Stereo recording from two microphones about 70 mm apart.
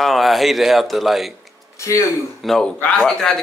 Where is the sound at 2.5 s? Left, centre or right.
Centre.